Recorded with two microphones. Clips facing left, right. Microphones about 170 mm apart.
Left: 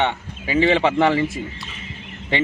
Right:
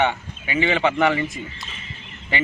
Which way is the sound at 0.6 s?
30° left (ahead or behind).